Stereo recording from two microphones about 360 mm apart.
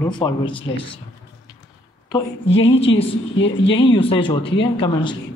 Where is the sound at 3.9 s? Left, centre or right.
Centre.